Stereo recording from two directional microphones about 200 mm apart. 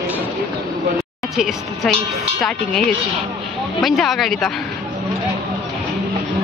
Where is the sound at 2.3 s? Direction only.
Centre (ahead or behind).